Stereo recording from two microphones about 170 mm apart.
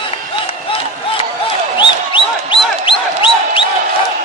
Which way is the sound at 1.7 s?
30° left (ahead or behind).